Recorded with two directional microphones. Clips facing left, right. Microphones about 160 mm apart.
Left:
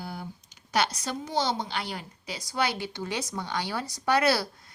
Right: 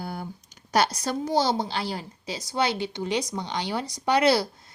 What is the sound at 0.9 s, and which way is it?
A woman's voice, 35° right (ahead or behind).